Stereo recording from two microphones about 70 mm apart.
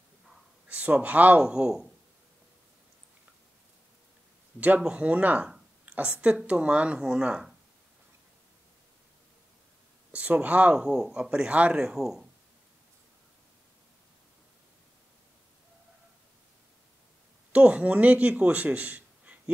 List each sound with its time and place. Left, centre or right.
0.7 s speech: centre
1.5 s speech: centre
4.6 s speech: right
10.1 s speech: centre
17.5 s a man's voice: centre